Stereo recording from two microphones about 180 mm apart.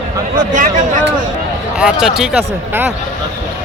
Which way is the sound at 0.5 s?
45° right (ahead or behind).